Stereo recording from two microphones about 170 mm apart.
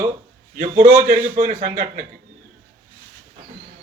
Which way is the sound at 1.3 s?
50° right (ahead or behind).